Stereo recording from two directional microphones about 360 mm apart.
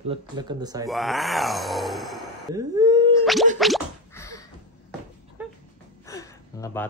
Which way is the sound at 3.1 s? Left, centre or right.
Centre.